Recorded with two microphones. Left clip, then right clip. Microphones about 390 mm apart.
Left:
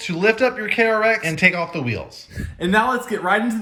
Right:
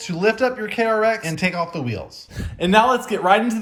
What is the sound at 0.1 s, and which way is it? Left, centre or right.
A man's voice, centre.